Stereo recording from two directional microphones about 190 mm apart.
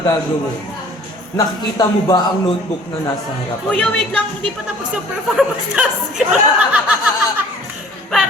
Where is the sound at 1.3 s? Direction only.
20° left (ahead or behind).